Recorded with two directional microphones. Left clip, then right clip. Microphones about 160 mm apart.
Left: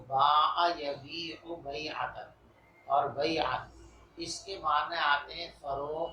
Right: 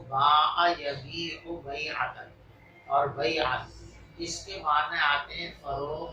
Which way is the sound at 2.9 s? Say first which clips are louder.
Right 3 dB; 45° left (ahead or behind).